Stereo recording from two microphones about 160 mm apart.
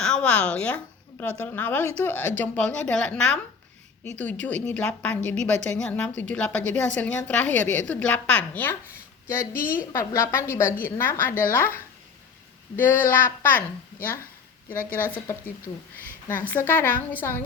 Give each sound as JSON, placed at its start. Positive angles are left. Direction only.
{"t": 0.0, "sound": "a woman's voice", "side_deg": 5}
{"t": 4.6, "sound": "a woman's voice", "side_deg": 5}
{"t": 14.7, "sound": "a woman's voice", "side_deg": 60}
{"t": 15.0, "sound": "a woman's voice", "side_deg": 10}